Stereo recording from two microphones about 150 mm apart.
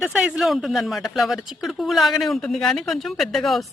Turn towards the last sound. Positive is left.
turn(degrees=0)  # may be behind; listen again after turning